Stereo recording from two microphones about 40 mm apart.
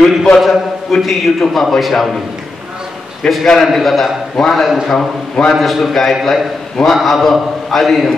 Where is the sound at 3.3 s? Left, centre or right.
Centre.